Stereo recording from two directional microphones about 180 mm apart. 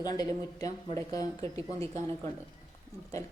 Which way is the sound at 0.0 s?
20° left (ahead or behind).